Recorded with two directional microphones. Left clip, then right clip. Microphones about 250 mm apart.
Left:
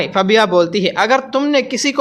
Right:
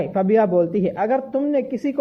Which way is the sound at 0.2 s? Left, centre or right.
Centre.